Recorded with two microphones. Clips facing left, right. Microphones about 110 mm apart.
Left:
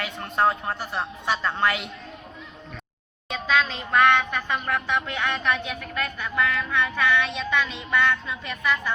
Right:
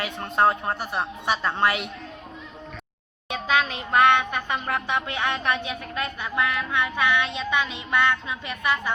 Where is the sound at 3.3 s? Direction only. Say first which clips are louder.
Even; 20° right (ahead or behind).